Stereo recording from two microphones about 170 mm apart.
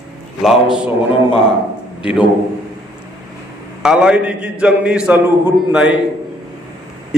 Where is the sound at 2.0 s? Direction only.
5° right (ahead or behind).